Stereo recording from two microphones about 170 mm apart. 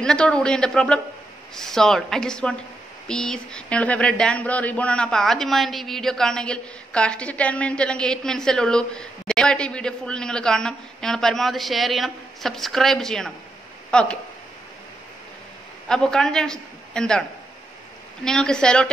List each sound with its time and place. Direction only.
0.0 s speech: 5° left (ahead or behind)
15.9 s a man's voice: 5° left (ahead or behind)
18.2 s speech: 5° left (ahead or behind)